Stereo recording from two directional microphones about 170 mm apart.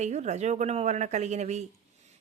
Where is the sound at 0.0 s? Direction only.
40° right (ahead or behind).